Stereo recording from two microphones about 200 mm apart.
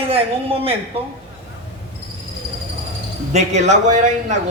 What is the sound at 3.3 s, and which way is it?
A man's voice, 35° right (ahead or behind).